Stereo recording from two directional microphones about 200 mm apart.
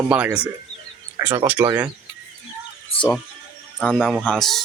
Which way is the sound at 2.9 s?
25° left (ahead or behind).